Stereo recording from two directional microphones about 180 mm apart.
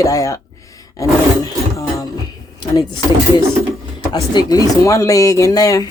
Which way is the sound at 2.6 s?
25° left (ahead or behind).